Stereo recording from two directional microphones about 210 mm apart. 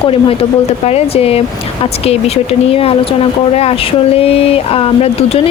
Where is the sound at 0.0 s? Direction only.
25° left (ahead or behind).